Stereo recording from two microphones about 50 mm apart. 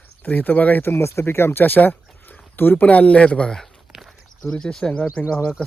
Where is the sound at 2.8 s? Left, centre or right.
Left.